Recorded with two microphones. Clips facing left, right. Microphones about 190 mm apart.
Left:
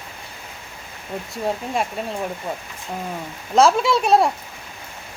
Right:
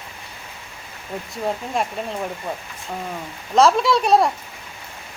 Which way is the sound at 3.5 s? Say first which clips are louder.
Even; centre (ahead or behind).